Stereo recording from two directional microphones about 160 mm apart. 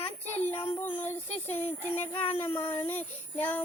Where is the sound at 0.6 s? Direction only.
10° left (ahead or behind).